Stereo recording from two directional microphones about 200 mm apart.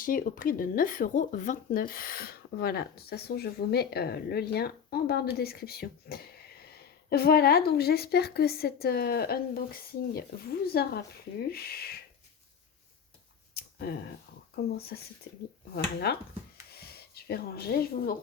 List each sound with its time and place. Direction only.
0.0 s speech: 45° left (ahead or behind)
13.5 s a sound: 55° left (ahead or behind)
14.5 s speech: 50° left (ahead or behind)